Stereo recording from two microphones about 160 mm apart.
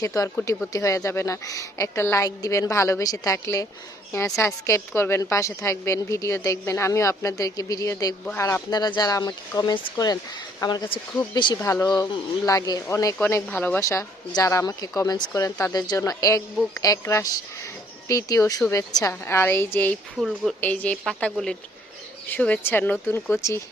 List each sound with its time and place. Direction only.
0.0 s a woman's voice: 20° left (ahead or behind)
11.6 s a woman's voice: 20° left (ahead or behind)
13.1 s a woman's voice: 10° left (ahead or behind)
20.1 s a woman's voice: centre (ahead or behind); by 23.6 s 15° left (ahead or behind)